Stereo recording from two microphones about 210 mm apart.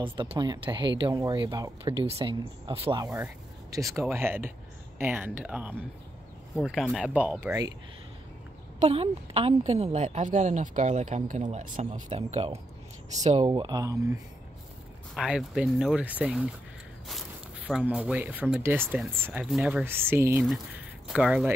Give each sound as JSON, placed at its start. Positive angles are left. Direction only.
{"t": 0.0, "sound": "speech", "side_deg": -25}
{"t": 8.7, "sound": "a woman's voice", "side_deg": -30}
{"t": 15.1, "sound": "speech", "side_deg": -5}
{"t": 17.6, "sound": "speech", "side_deg": -5}